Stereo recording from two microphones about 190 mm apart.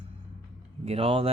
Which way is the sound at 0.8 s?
30° right (ahead or behind).